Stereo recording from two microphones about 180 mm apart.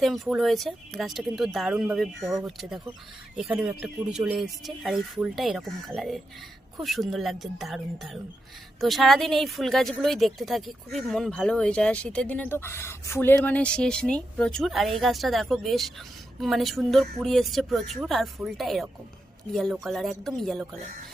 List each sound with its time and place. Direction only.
0.0 s speech: centre (ahead or behind)